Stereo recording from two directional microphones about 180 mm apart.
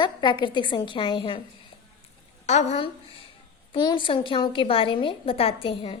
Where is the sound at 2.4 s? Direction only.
40° left (ahead or behind).